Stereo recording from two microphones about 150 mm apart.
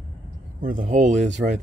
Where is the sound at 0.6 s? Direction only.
60° right (ahead or behind).